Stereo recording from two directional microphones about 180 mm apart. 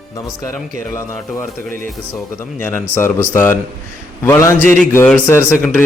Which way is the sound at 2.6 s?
10° left (ahead or behind).